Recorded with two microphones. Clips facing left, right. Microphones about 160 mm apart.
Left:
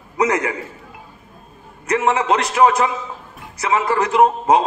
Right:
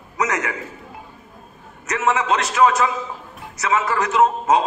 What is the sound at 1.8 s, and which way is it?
A man's voice, 30° left (ahead or behind).